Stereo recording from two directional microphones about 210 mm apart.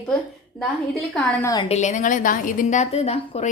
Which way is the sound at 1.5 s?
20° left (ahead or behind).